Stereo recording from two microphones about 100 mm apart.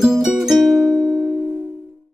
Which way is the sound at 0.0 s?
5° right (ahead or behind).